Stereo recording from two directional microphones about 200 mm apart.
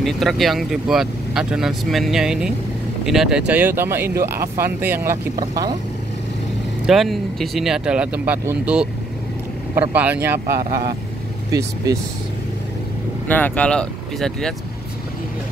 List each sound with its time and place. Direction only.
0.0 s speech: centre (ahead or behind); by 5.8 s 20° right (ahead or behind)
6.9 s speech: centre (ahead or behind)
10.4 s speech: 45° right (ahead or behind)
11.5 s speech: 15° right (ahead or behind)
13.3 s speech: 5° left (ahead or behind)